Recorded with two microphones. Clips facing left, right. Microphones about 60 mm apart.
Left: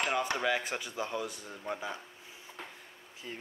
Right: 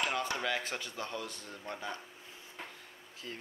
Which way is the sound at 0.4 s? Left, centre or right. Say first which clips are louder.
Left 4 dB; centre.